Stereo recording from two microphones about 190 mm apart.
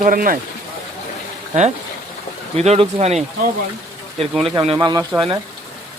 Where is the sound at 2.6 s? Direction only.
30° right (ahead or behind).